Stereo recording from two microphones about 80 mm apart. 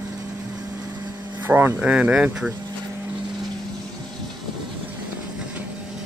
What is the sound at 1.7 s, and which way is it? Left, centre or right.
Speech, centre.